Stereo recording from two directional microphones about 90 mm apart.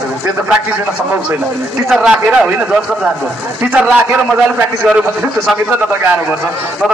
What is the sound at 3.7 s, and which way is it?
Speech, 15° right (ahead or behind).